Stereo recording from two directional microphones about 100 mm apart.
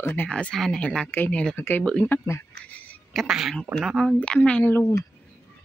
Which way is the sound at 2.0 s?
20° left (ahead or behind).